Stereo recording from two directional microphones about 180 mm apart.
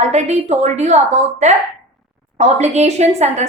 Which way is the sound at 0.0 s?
40° right (ahead or behind).